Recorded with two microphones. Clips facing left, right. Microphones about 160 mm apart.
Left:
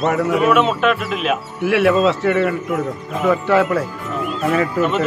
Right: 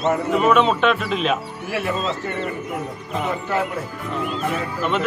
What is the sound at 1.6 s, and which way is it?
Speech, 80° left.